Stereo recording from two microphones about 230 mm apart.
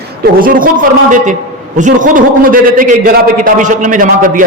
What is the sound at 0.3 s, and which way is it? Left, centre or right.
A man's voice, right.